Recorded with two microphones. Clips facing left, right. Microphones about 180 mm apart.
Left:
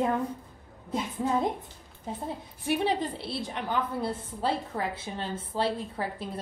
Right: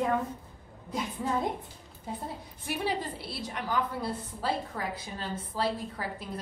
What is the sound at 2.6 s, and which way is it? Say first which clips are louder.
A woman's voice: left 5 dB; 25° left (ahead or behind).